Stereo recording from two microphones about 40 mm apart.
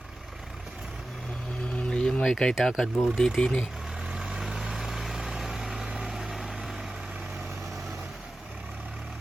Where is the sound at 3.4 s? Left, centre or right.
Left.